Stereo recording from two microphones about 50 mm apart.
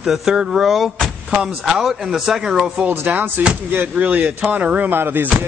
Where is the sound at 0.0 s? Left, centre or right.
Centre.